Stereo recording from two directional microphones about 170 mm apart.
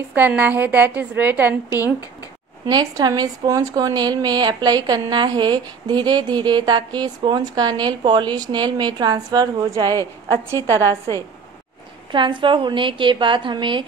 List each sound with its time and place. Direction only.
0.1 s a woman's voice: 10° right (ahead or behind)
2.6 s speech: 25° right (ahead or behind)
12.1 s speech: 30° right (ahead or behind)